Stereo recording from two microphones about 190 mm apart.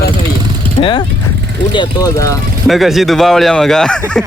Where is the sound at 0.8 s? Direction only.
25° left (ahead or behind).